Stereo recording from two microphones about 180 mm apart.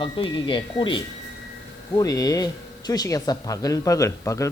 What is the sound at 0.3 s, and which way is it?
Speech, 25° left (ahead or behind).